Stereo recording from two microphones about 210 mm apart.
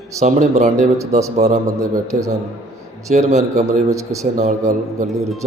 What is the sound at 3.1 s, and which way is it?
Speech, 30° right (ahead or behind).